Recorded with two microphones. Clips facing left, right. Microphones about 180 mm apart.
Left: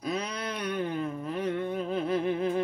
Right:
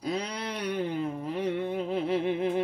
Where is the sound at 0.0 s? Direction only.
30° right (ahead or behind).